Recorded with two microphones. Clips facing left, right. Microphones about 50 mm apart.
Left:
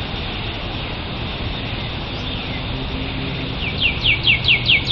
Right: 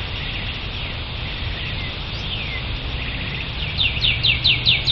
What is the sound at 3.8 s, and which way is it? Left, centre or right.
Bird, left.